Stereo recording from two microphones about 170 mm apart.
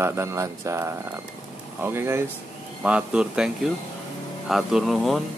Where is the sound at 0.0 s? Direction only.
15° right (ahead or behind); by 5.2 s centre (ahead or behind).